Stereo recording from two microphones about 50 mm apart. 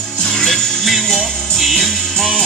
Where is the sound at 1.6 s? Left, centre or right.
Centre.